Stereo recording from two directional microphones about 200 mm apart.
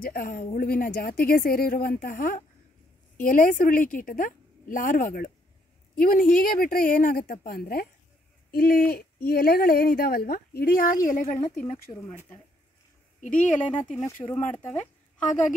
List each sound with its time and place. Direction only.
0.0 s a woman's voice: 45° left (ahead or behind)
13.2 s speech: 40° left (ahead or behind)
14.3 s speech: 5° left (ahead or behind)